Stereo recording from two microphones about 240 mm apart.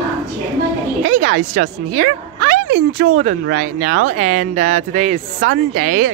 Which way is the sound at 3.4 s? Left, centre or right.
Right.